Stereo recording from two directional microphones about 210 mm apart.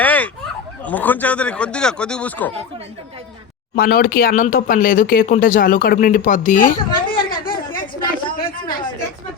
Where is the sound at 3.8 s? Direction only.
45° left (ahead or behind).